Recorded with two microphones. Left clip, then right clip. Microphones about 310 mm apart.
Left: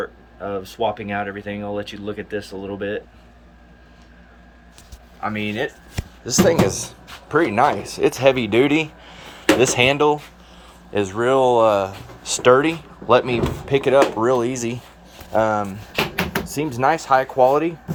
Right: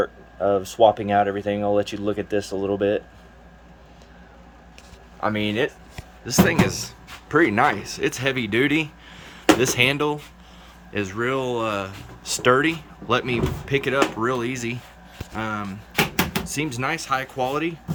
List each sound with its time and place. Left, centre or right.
0.0 s speech: right
5.2 s speech: centre